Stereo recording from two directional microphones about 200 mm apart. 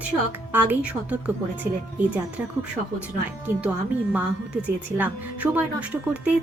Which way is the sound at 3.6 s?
5° right (ahead or behind).